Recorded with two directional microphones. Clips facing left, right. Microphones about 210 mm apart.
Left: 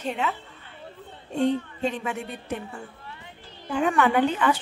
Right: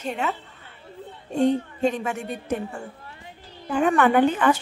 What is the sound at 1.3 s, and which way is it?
A woman's voice, 45° right (ahead or behind).